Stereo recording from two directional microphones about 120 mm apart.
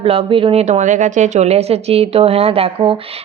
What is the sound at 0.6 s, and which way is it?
Speech, 80° right.